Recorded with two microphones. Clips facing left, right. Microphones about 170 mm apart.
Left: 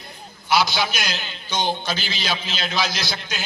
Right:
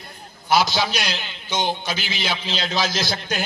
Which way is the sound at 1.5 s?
20° right (ahead or behind).